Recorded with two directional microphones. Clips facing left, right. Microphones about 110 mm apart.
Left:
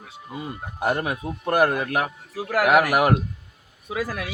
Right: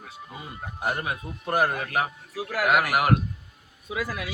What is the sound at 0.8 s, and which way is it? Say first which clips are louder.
A man's voice: left 5 dB; 60° left (ahead or behind).